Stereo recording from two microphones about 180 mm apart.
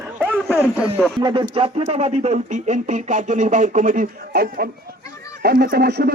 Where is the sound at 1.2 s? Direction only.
25° right (ahead or behind); by 6.1 s 65° right (ahead or behind).